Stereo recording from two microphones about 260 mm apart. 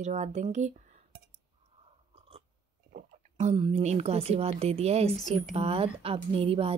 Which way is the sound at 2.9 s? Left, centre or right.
Right.